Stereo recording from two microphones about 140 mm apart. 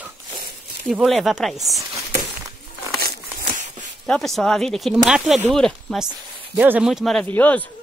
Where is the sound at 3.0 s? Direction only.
70° right (ahead or behind).